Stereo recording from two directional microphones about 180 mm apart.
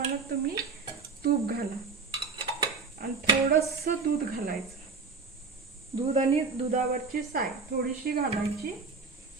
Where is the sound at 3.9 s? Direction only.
50° right (ahead or behind).